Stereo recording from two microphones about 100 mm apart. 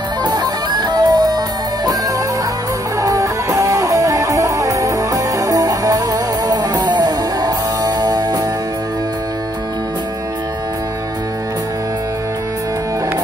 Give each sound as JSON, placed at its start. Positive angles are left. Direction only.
{"t": 0.2, "sound": "music", "side_deg": -45}
{"t": 3.0, "sound": "music", "side_deg": -35}